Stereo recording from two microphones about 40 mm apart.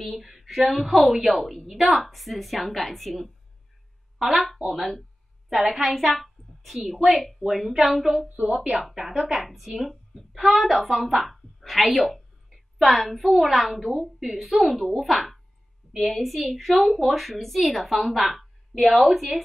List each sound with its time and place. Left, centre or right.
0.0 s a woman's voice: centre
8.4 s speech: centre
9.4 s a woman's voice: centre